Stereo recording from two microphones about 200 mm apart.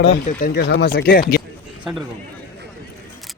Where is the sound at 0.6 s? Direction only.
55° left (ahead or behind).